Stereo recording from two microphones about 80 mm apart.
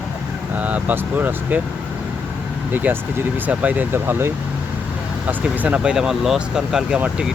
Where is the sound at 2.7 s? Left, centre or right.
Right.